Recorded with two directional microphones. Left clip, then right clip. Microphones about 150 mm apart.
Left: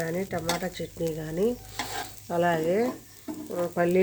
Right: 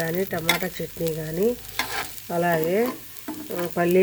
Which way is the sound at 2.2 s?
15° right (ahead or behind).